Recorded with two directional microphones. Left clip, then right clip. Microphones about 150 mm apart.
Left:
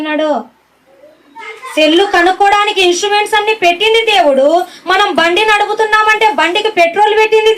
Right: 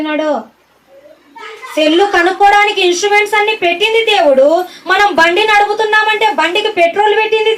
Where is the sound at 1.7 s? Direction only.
25° left (ahead or behind).